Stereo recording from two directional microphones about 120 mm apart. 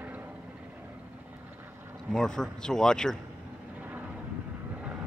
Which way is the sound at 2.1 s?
5° left (ahead or behind).